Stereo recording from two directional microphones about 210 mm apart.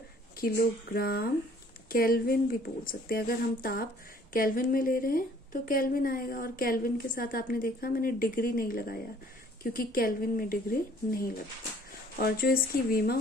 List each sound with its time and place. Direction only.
0.4 s a woman's voice: 45° left (ahead or behind)